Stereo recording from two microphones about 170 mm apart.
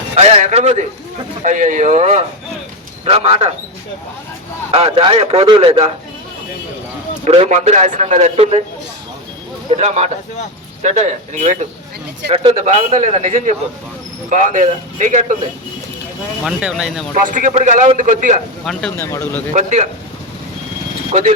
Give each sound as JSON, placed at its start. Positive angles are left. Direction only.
{"t": 0.2, "sound": "a man's voice", "side_deg": -40}
{"t": 4.7, "sound": "a man's voice", "side_deg": -30}
{"t": 7.3, "sound": "a man's voice", "side_deg": -40}
{"t": 9.6, "sound": "a man's voice", "side_deg": -40}
{"t": 12.3, "sound": "a man's voice", "side_deg": -35}
{"t": 16.4, "sound": "speech", "side_deg": -5}
{"t": 17.2, "sound": "a man's voice", "side_deg": -50}
{"t": 18.6, "sound": "speech", "side_deg": 0}
{"t": 18.9, "sound": "speech", "side_deg": 15}
{"t": 19.5, "sound": "a man's voice", "side_deg": -45}
{"t": 21.1, "sound": "speech", "side_deg": -45}